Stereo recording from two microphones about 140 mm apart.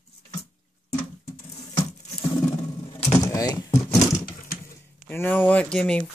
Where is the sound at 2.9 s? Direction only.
25° left (ahead or behind).